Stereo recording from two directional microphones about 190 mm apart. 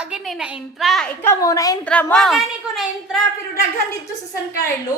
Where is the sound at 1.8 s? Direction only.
5° left (ahead or behind).